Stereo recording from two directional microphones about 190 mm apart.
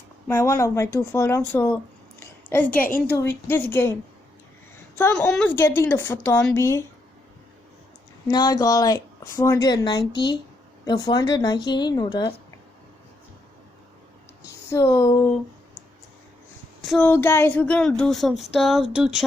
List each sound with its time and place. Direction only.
0.3 s a woman's voice: 15° left (ahead or behind)
4.9 s a woman's voice: 10° left (ahead or behind)
8.3 s a woman's voice: 20° left (ahead or behind)
14.7 s a woman's voice: 15° left (ahead or behind)
16.8 s speech: 5° left (ahead or behind)